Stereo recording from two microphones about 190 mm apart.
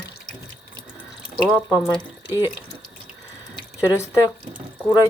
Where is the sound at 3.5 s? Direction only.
20° left (ahead or behind).